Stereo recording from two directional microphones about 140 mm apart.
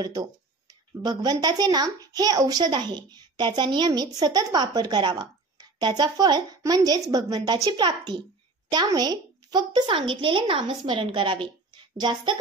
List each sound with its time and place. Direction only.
0.0 s a woman's voice: 30° right (ahead or behind)